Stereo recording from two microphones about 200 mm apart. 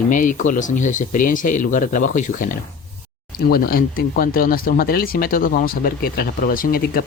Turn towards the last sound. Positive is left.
turn(degrees=45)  # may be behind; listen again after turning